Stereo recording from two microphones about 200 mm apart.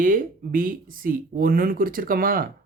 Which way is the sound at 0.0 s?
45° right (ahead or behind).